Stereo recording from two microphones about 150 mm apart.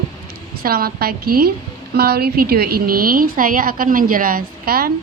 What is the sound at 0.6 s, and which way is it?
A woman's voice, 85° right.